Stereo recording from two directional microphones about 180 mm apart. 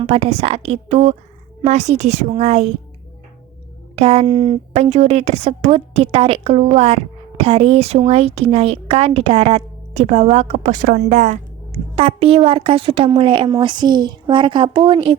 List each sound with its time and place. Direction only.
0.0 s a woman's voice: 35° right (ahead or behind)
3.9 s a woman's voice: 35° right (ahead or behind)